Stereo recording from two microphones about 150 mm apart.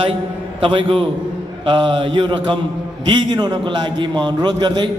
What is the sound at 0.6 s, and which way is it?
A man's voice, 35° right (ahead or behind).